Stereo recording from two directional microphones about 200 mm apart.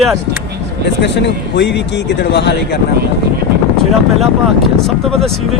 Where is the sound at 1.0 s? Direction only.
60° left (ahead or behind).